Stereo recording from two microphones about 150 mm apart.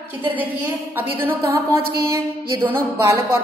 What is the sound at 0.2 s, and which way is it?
A woman's voice, 10° right (ahead or behind).